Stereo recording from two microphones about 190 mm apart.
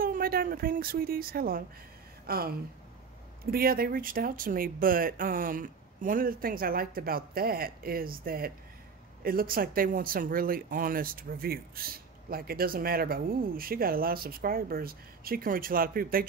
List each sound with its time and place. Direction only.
0.0 s a woman's voice: 50° right (ahead or behind)